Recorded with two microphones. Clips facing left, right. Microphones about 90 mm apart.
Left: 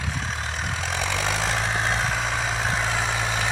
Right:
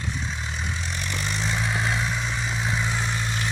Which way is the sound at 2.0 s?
90° left.